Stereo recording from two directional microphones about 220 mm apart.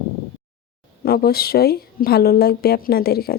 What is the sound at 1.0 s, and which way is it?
A woman's voice, 45° left (ahead or behind).